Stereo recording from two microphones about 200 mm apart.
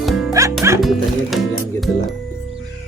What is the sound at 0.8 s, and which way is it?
Music, centre (ahead or behind).